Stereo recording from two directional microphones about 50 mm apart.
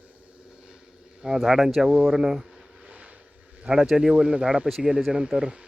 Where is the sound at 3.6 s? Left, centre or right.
Centre.